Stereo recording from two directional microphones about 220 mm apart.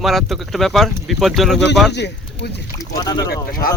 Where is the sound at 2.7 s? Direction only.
15° left (ahead or behind).